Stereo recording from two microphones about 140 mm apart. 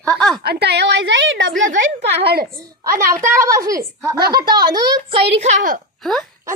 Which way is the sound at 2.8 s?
20° right (ahead or behind).